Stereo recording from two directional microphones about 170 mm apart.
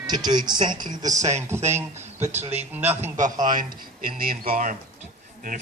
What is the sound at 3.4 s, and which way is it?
A man's voice, 50° right (ahead or behind).